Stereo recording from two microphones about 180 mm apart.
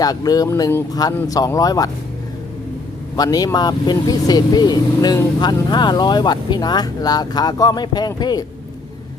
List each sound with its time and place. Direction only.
0.0 s speech: 20° left (ahead or behind)
3.2 s speech: 20° left (ahead or behind)